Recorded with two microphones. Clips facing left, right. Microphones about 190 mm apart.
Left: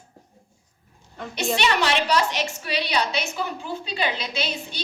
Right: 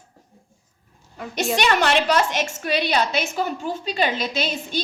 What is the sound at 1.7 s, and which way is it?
A woman's voice, 50° right (ahead or behind).